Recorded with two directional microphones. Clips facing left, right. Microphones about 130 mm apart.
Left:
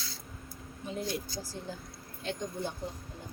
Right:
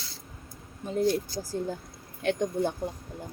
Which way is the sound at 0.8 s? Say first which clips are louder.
Right 10 dB; 45° right (ahead or behind).